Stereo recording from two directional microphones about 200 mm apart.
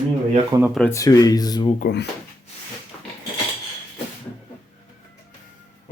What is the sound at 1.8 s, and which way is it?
Speech, 50° left (ahead or behind).